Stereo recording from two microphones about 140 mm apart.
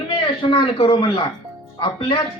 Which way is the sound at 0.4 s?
40° left (ahead or behind).